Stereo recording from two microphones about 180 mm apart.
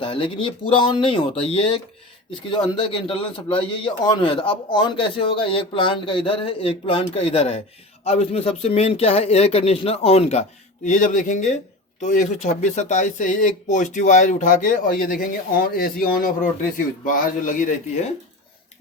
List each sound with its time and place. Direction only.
0.0 s a man's voice: 30° left (ahead or behind); by 17.7 s 45° left (ahead or behind)